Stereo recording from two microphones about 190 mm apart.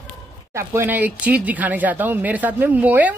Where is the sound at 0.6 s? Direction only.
10° right (ahead or behind).